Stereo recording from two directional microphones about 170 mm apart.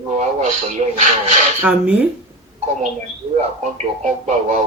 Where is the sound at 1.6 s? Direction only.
10° right (ahead or behind).